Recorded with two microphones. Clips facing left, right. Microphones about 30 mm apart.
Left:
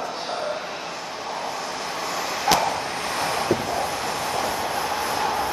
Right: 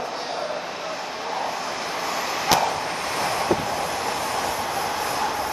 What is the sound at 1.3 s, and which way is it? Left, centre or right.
Vehicle, centre.